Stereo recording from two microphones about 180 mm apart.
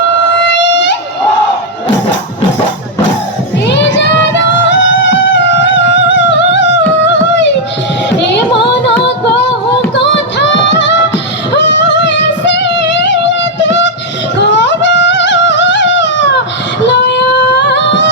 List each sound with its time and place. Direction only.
0.3 s music: 80° left
3.7 s music: 75° left (ahead or behind)
8.2 s a sound: 75° left (ahead or behind)
9.9 s music: 75° left (ahead or behind)
16.8 s singing: 75° left (ahead or behind)